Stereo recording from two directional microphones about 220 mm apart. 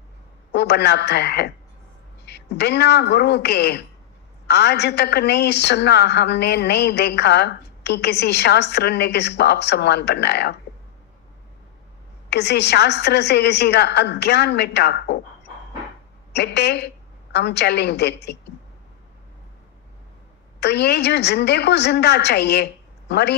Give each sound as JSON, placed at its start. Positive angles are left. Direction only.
{"t": 0.5, "sound": "a woman's voice", "side_deg": 50}
{"t": 12.3, "sound": "a woman's voice", "side_deg": 50}
{"t": 16.3, "sound": "a woman's voice", "side_deg": 50}
{"t": 20.6, "sound": "a woman's voice", "side_deg": 50}